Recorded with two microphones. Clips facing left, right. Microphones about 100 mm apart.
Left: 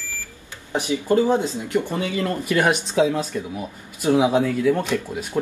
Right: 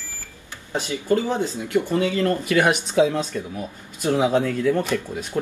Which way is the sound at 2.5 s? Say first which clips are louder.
Even; 5° left (ahead or behind).